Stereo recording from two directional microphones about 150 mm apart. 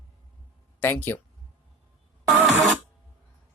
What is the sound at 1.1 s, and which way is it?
Speech, 15° left (ahead or behind).